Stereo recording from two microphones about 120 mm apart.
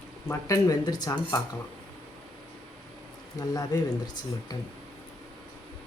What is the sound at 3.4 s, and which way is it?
Speech, 30° left (ahead or behind).